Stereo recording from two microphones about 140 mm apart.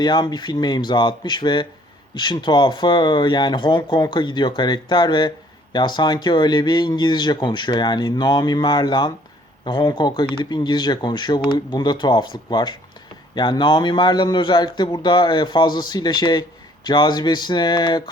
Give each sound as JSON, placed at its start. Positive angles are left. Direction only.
{"t": 0.0, "sound": "speech", "side_deg": 30}